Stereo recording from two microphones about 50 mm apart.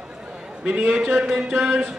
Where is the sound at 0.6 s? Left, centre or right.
Right.